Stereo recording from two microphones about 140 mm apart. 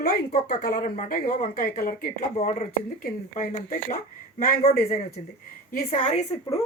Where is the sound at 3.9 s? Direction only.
90° left.